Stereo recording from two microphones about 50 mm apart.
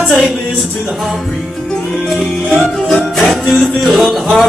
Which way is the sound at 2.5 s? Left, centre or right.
Centre.